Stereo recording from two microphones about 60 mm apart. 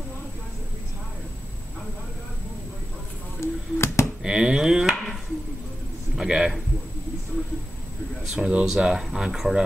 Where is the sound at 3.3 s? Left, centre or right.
Left.